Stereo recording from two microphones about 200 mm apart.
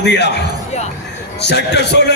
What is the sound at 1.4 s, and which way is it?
Speech, 60° left (ahead or behind).